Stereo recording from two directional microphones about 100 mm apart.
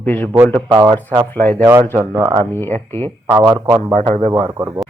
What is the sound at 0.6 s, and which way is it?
Speech, 40° right (ahead or behind).